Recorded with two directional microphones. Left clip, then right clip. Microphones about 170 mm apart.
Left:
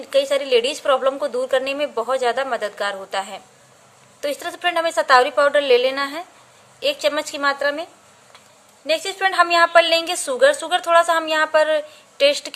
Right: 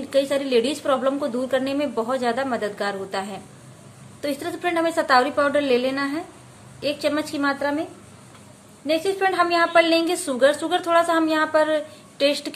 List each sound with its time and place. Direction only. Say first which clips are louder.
0.0 s a woman's voice: left 3 dB; 30° left (ahead or behind)
8.8 s a woman's voice: left 1 dB; 45° left (ahead or behind)